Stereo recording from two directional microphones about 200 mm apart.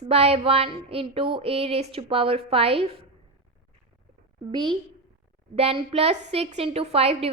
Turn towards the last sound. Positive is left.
turn(degrees=-30)  # may be behind; listen again after turning